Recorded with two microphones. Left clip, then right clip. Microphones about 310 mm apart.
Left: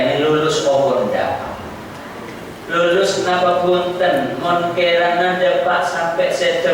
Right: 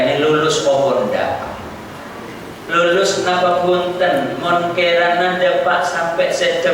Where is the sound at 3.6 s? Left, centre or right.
Right.